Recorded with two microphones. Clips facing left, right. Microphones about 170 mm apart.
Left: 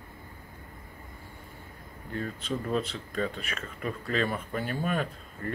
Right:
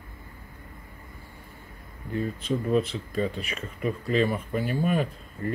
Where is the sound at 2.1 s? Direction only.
10° right (ahead or behind).